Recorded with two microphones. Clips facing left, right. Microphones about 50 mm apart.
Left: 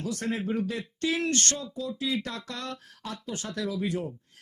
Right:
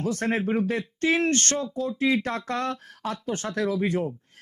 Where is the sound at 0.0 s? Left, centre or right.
Right.